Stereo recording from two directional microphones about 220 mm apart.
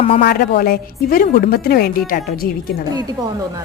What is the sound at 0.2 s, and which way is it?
A woman's voice, 45° left (ahead or behind).